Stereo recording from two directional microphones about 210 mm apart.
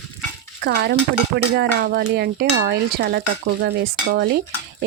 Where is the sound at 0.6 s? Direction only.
50° right (ahead or behind).